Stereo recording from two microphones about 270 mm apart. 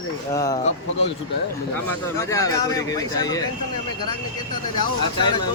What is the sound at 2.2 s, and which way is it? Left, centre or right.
Speech, centre.